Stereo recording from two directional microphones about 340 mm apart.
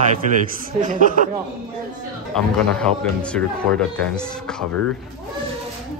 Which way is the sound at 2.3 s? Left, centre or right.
Centre.